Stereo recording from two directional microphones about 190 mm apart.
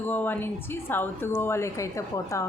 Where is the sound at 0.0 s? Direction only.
10° left (ahead or behind).